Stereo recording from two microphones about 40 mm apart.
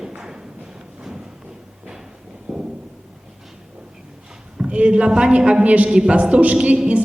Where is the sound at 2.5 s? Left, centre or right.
Right.